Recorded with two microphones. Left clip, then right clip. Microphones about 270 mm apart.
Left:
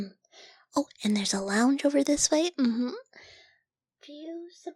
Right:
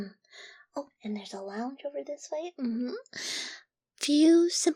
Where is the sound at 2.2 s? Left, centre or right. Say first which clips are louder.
Left 10 dB; left.